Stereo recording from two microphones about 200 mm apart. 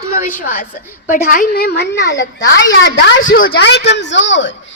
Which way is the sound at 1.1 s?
45° left (ahead or behind).